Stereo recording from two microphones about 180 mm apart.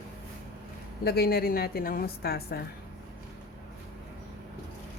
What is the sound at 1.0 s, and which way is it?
Speech, 60° left (ahead or behind).